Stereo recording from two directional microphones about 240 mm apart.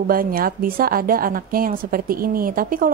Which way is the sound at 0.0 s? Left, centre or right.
Right.